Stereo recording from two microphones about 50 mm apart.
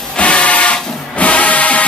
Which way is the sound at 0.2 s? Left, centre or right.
Left.